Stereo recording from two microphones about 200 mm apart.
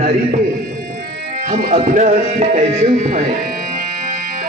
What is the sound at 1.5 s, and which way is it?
A man's voice, 40° right (ahead or behind).